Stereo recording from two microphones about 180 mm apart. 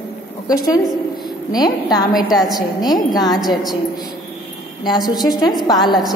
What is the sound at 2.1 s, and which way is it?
Speech, centre (ahead or behind).